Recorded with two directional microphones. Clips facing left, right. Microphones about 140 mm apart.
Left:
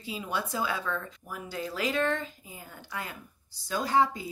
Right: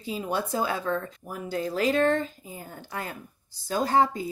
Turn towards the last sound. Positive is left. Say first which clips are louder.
# right 3 dB
turn(degrees=-45)  # may be behind; listen again after turning